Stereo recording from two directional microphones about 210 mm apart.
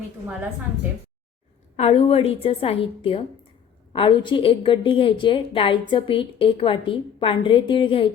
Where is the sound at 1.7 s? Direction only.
30° left (ahead or behind).